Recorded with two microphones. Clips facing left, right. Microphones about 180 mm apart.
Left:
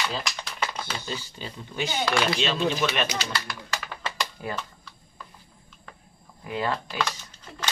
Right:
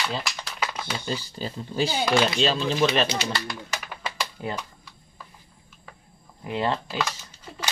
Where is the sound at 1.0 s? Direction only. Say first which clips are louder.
Right 5 dB; 35° right (ahead or behind).